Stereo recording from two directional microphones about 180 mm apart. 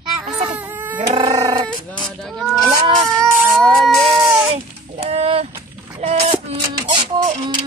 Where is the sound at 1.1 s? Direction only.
25° right (ahead or behind).